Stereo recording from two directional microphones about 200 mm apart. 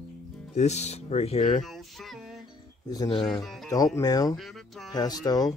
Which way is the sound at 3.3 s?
Centre (ahead or behind).